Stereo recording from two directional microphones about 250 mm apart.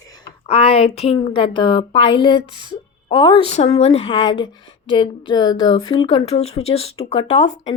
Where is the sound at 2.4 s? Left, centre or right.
Centre.